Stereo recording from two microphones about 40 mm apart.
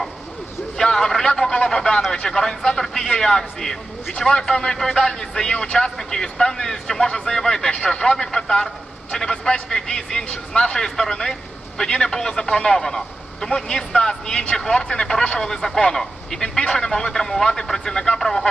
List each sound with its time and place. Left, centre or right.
0.8 s a sound: centre
1.4 s speech: centre
18.2 s radio: centre